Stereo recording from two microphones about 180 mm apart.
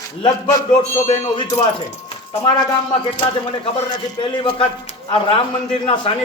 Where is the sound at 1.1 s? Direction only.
20° left (ahead or behind).